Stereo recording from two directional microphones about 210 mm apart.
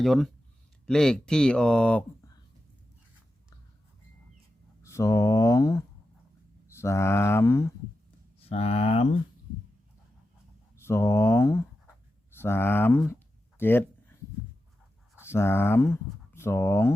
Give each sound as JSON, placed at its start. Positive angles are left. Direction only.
{"t": 0.0, "sound": "speech", "side_deg": 0}
{"t": 4.8, "sound": "speech", "side_deg": 15}
{"t": 8.4, "sound": "speech", "side_deg": 30}
{"t": 10.8, "sound": "speech", "side_deg": 10}
{"t": 13.1, "sound": "a sound", "side_deg": 10}
{"t": 15.2, "sound": "speech", "side_deg": 10}